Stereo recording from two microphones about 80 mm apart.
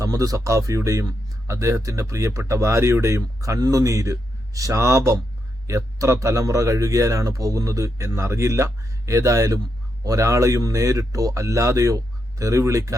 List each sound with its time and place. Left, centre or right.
0.0 s speech: right